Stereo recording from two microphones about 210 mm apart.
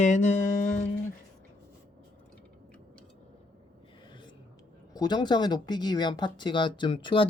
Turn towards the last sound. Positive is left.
turn(degrees=25)  # may be behind; listen again after turning